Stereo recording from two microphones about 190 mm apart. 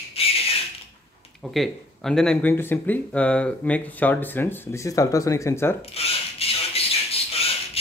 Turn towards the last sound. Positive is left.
turn(degrees=30)  # may be behind; listen again after turning